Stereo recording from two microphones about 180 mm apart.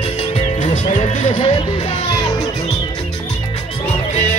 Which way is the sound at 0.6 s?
40° left (ahead or behind).